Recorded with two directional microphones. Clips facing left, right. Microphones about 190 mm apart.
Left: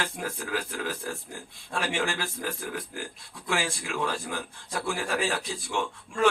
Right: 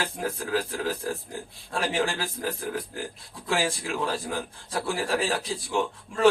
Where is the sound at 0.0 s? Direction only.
35° right (ahead or behind).